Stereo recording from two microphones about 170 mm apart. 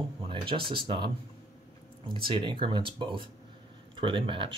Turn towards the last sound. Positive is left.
turn(degrees=-30)  # may be behind; listen again after turning